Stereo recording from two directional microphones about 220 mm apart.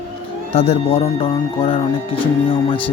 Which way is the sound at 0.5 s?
25° left (ahead or behind).